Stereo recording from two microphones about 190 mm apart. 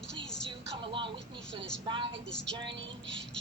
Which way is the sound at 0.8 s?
25° right (ahead or behind).